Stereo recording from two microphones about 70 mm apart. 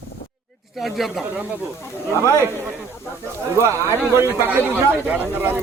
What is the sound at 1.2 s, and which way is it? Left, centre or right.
Speech, right.